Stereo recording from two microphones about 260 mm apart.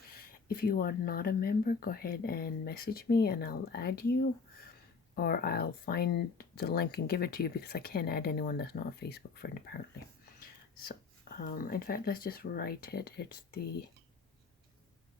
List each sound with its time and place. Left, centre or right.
0.1 s speech: left
11.3 s speech: left